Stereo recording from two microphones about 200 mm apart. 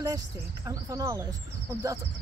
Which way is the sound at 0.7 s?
15° right (ahead or behind).